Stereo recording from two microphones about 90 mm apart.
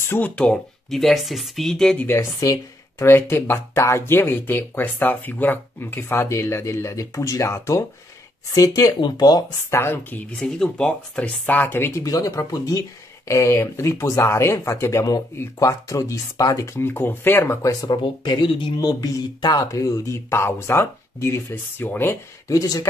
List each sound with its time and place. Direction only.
0.1 s speech: 15° left (ahead or behind)
0.8 s speech: centre (ahead or behind)
2.0 s speech: 25° left (ahead or behind)
2.4 s speech: 40° left (ahead or behind)
3.1 s speech: 25° left (ahead or behind); by 9.4 s 50° left (ahead or behind)
9.7 s speech: 25° left (ahead or behind)
10.3 s speech: 5° left (ahead or behind); by 12.0 s 25° left (ahead or behind)
12.0 s speech: 40° left (ahead or behind)
13.3 s speech: 35° left (ahead or behind)
16.9 s speech: 25° left (ahead or behind)
17.8 s speech: 55° left (ahead or behind)
18.8 s speech: 45° left (ahead or behind); by 22.1 s 25° left (ahead or behind)
22.5 s speech: 40° left (ahead or behind)